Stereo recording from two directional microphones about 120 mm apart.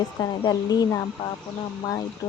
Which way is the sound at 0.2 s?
30° left (ahead or behind).